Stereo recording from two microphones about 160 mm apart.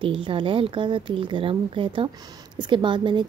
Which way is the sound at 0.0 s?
35° right (ahead or behind).